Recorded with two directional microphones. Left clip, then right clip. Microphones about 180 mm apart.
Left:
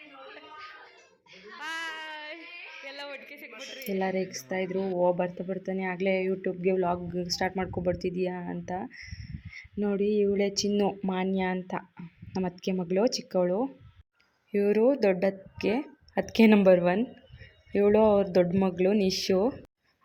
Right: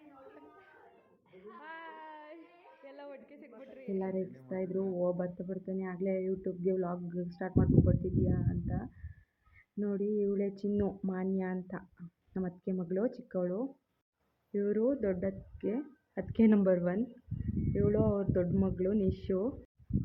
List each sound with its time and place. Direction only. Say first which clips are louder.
1.6 s a sound: left 13 dB; 5° left (ahead or behind)
3.4 s speech: left 7 dB; 20° left (ahead or behind)
4.4 s speech: left 3 dB; 15° left (ahead or behind)